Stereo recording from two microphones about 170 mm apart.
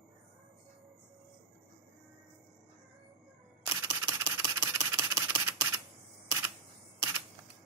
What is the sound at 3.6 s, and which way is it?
Camera, 15° right (ahead or behind).